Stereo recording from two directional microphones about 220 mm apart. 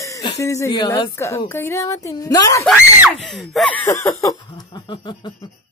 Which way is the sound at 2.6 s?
5° right (ahead or behind).